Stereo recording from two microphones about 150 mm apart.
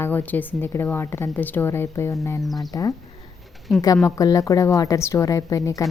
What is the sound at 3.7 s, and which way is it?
Speech, 5° right (ahead or behind).